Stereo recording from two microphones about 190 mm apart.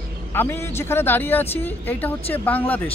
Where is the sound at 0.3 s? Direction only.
10° left (ahead or behind).